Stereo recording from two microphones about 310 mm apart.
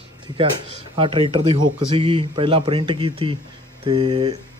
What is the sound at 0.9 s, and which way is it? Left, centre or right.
A man's voice, centre.